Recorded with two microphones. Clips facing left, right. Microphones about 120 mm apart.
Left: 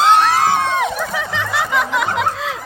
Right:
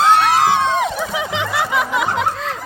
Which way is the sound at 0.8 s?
10° right (ahead or behind).